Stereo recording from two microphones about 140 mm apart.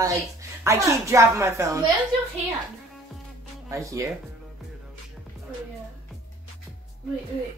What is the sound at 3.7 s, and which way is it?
Speech, 25° right (ahead or behind).